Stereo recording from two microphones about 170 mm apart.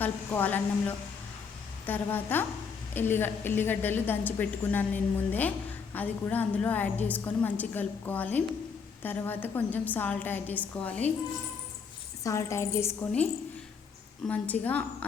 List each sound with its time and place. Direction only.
0.0 s a woman's voice: 10° left (ahead or behind)
12.2 s a woman's voice: 15° left (ahead or behind)
14.3 s a woman's voice: 10° left (ahead or behind)